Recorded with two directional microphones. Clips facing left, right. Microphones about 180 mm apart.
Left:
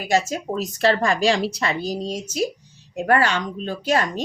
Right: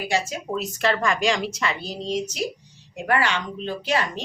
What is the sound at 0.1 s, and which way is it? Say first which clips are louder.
A woman's voice: left 6 dB; 40° left (ahead or behind).